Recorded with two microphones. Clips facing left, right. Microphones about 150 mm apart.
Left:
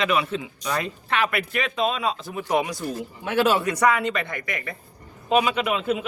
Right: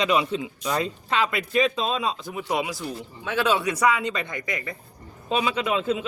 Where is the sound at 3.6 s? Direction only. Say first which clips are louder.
Left 1 dB; 10° right (ahead or behind); by 6.0 s 25° right (ahead or behind).